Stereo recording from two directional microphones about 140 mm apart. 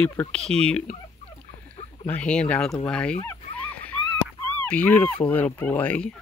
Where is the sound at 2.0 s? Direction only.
10° left (ahead or behind).